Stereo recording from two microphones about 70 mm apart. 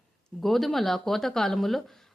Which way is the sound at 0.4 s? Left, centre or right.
Centre.